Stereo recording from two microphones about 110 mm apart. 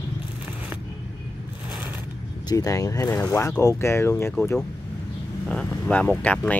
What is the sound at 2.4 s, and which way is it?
Speech, 30° left (ahead or behind).